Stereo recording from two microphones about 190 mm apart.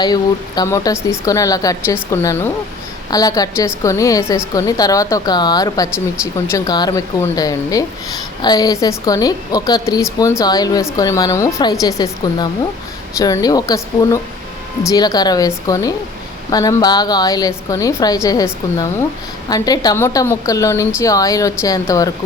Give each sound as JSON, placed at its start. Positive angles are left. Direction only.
{"t": 0.0, "sound": "a woman's voice", "side_deg": 20}